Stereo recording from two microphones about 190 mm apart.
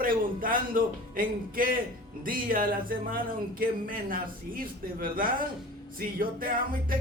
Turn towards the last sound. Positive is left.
turn(degrees=-50)  # may be behind; listen again after turning